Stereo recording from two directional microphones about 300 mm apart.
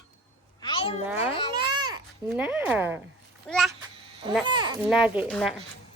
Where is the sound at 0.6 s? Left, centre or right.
Centre.